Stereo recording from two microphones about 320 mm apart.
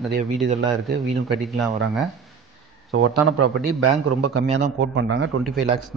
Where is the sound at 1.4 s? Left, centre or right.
Centre.